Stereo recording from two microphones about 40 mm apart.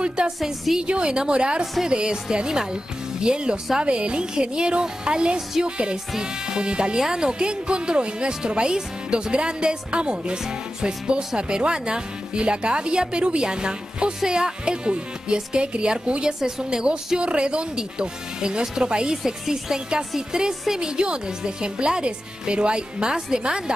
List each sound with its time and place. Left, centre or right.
0.2 s a woman's voice: right